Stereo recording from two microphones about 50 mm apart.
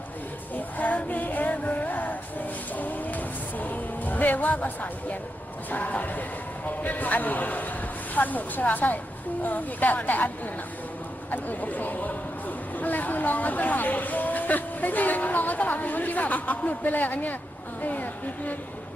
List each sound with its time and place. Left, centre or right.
0.5 s music: left
5.7 s speech: left